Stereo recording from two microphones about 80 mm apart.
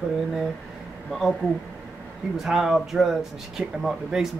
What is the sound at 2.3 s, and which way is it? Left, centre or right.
Speech, centre.